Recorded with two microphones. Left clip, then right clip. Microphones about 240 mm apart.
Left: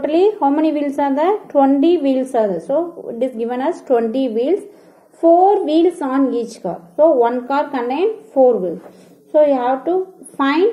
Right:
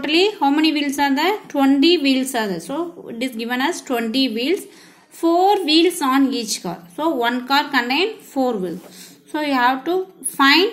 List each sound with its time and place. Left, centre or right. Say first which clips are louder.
0.0 s a woman's voice: left 3 dB; right